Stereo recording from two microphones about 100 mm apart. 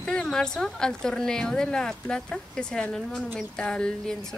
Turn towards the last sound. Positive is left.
turn(degrees=5)  # may be behind; listen again after turning